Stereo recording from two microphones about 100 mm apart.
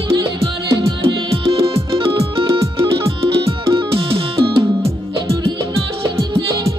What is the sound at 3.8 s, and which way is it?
Music, 70° right (ahead or behind).